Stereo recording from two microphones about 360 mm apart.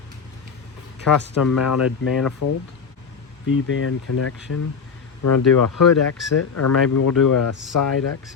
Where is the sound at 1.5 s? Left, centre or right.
Left.